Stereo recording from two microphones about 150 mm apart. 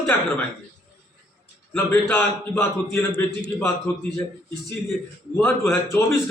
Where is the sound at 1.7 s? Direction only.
15° left (ahead or behind).